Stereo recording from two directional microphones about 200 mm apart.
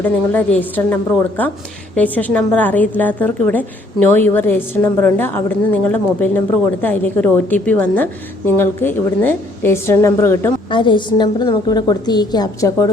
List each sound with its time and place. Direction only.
0.0 s a woman's voice: 10° left (ahead or behind)
2.0 s a woman's voice: 10° left (ahead or behind)
10.7 s a woman's voice: 25° left (ahead or behind)